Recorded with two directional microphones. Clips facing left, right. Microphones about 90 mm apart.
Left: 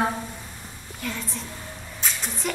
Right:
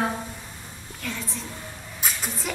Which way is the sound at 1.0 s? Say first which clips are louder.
Left 1 dB; centre (ahead or behind).